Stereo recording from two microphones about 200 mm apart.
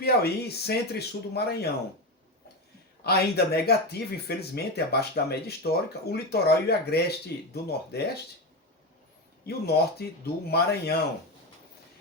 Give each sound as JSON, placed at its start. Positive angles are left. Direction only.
{"t": 0.0, "sound": "speech", "side_deg": 55}
{"t": 3.0, "sound": "speech", "side_deg": 55}
{"t": 9.5, "sound": "speech", "side_deg": 55}